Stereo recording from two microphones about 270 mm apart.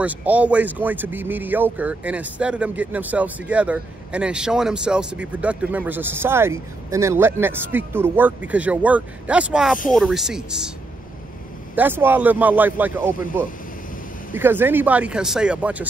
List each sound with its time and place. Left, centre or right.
0.0 s a man's voice: centre
11.7 s a man's voice: centre